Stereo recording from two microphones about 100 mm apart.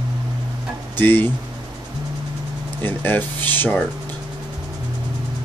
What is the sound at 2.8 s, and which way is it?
Speech, 20° left (ahead or behind).